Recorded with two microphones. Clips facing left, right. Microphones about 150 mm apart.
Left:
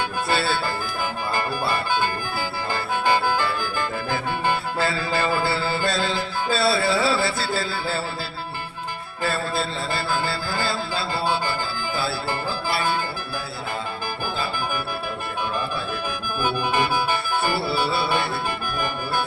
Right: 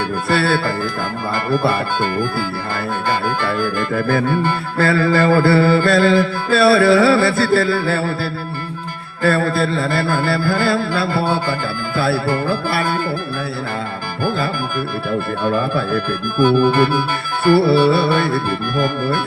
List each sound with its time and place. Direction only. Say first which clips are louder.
0.3 s music: right 7 dB; 55° right (ahead or behind)
3.9 s music: right 9 dB; 60° right (ahead or behind)
15.4 s music: right 10 dB; 60° right (ahead or behind)
16.0 s music: right 10 dB; 10° left (ahead or behind)
17.5 s music: right 17 dB; 55° right (ahead or behind)